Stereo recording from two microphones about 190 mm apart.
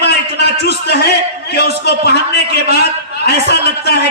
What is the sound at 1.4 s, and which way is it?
Speech, 60° left (ahead or behind).